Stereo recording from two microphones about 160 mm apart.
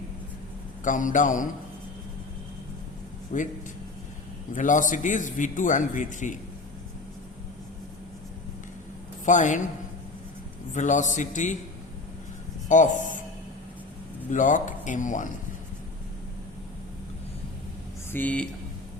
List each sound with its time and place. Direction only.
0.9 s speech: 55° left (ahead or behind)
3.3 s a man's voice: 50° left (ahead or behind)
4.5 s a man's voice: 55° left (ahead or behind)
9.2 s a man's voice: 50° left (ahead or behind)
10.8 s a man's voice: 50° left (ahead or behind)
12.6 s a man's voice: 50° left (ahead or behind)
14.3 s a man's voice: 55° left (ahead or behind)
18.1 s speech: 10° left (ahead or behind)